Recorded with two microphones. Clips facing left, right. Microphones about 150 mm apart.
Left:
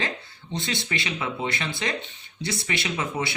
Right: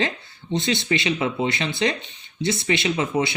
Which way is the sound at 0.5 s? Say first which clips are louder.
Right 7 dB; 25° right (ahead or behind).